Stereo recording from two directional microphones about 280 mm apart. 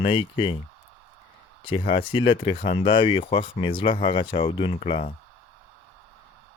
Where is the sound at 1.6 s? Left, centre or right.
Centre.